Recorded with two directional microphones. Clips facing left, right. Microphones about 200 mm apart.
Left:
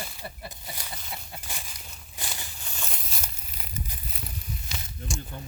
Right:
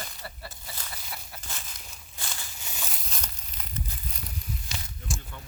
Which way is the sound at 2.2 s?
15° left (ahead or behind).